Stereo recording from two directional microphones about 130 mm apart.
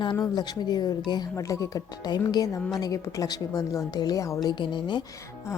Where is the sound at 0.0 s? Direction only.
35° left (ahead or behind).